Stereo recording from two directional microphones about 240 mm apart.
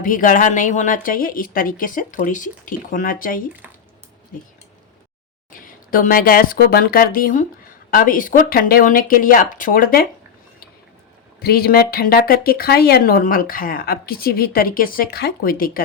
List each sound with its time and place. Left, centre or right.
0.0 s speech: left
5.5 s speech: left
11.3 s speech: left